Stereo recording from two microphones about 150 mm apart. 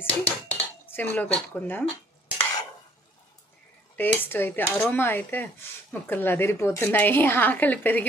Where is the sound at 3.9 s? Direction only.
15° left (ahead or behind).